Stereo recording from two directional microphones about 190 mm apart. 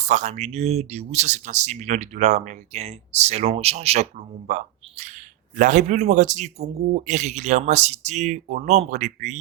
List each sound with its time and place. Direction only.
0.0 s speech: 35° right (ahead or behind)